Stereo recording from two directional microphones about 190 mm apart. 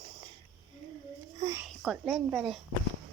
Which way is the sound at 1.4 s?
20° right (ahead or behind).